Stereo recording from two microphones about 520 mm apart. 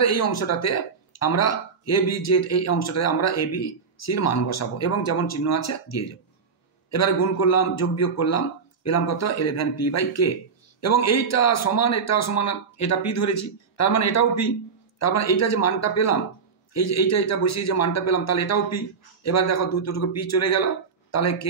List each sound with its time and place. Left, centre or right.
0.0 s a man's voice: left